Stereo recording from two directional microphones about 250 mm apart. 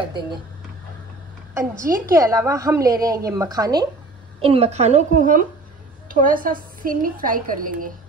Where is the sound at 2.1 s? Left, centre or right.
Centre; by 7.9 s right.